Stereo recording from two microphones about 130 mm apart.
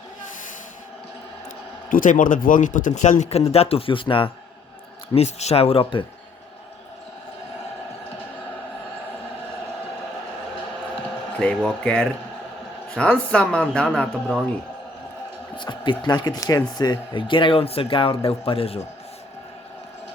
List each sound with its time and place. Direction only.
1.9 s speech: 90° left; by 4.3 s 40° left (ahead or behind)
5.1 s speech: 55° left (ahead or behind)
11.3 s speech: 5° left (ahead or behind)
15.5 s speech: 40° left (ahead or behind)